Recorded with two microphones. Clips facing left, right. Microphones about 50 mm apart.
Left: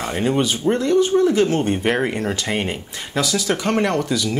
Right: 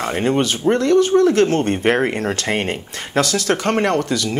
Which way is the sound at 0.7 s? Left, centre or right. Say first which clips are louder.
Right 3 dB; right.